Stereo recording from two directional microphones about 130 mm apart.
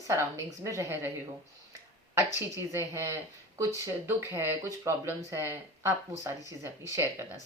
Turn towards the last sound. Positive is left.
turn(degrees=-20)  # may be behind; listen again after turning